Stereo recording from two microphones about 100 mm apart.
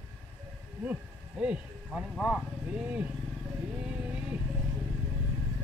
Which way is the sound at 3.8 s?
10° right (ahead or behind).